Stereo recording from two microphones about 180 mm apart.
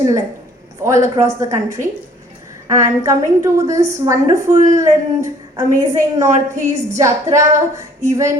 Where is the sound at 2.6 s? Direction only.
20° right (ahead or behind).